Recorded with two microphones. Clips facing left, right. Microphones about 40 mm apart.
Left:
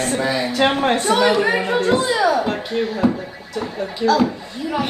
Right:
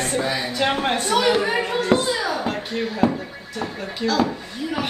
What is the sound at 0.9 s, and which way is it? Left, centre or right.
A woman's voice, left.